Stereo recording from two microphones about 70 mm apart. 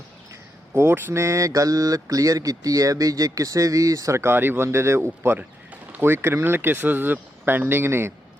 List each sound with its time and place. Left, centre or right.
0.7 s speech: right
1.2 s speech: right